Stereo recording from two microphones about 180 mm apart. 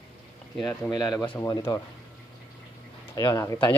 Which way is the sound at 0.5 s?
5° left (ahead or behind).